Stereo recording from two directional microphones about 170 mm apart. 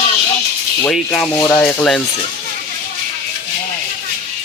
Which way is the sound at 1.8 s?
5° left (ahead or behind).